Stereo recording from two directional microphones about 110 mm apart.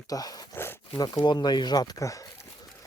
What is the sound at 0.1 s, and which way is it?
Speech, 35° left (ahead or behind).